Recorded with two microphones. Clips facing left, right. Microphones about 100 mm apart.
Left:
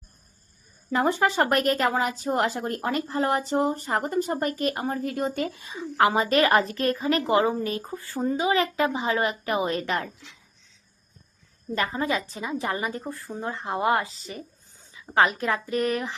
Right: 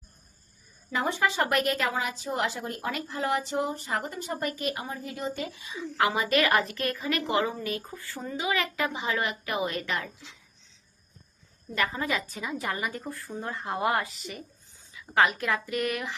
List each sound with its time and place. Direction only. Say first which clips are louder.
0.9 s speech: left 5 dB; 45° left (ahead or behind)
11.7 s a woman's voice: left 3 dB; 30° left (ahead or behind)